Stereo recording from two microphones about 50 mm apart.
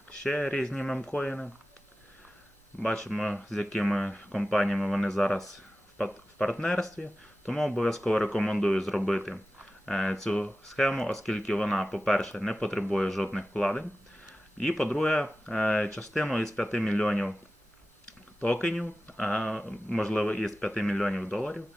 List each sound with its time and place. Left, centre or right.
0.1 s speech: centre
0.7 s speech: centre
2.8 s speech: centre
18.3 s speech: left